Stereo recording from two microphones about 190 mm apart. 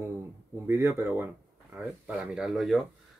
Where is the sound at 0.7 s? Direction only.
15° right (ahead or behind).